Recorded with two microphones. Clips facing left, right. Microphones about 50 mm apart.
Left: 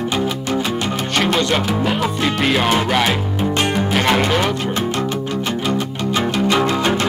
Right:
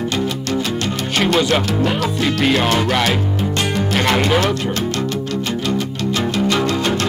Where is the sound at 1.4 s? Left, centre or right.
Centre.